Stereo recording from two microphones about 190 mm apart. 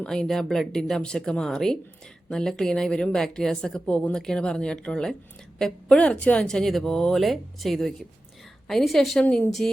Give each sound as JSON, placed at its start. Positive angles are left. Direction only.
{"t": 0.0, "sound": "a woman's voice", "side_deg": 5}